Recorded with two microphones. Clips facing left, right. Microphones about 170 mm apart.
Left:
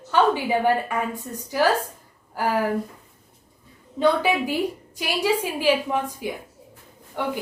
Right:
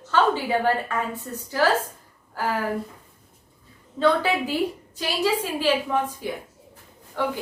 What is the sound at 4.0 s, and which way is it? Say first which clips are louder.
A woman's voice: left 1 dB; 15° left (ahead or behind).